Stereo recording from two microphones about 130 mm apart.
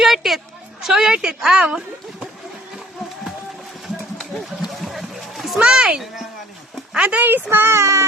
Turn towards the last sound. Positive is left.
turn(degrees=-20)  # may be behind; listen again after turning